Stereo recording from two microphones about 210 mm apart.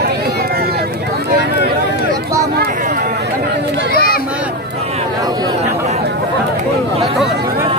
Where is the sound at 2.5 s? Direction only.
45° right (ahead or behind).